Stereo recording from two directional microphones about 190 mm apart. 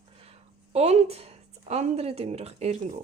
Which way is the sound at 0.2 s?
35° right (ahead or behind).